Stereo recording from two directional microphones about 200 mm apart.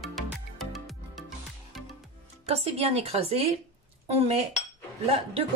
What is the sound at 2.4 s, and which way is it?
A woman's voice, 30° right (ahead or behind).